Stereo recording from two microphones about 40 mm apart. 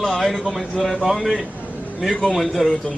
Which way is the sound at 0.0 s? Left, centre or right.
Centre.